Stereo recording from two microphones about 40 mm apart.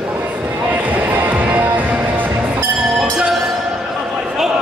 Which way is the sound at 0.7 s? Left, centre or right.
Right.